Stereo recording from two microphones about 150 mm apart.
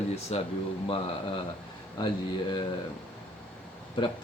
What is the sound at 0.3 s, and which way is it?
Speech, 45° left (ahead or behind).